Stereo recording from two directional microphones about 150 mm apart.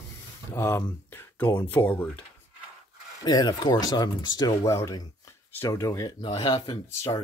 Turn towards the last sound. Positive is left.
turn(degrees=25)  # may be behind; listen again after turning